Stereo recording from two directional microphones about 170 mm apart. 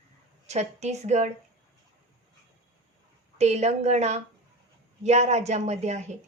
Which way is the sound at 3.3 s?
40° right (ahead or behind).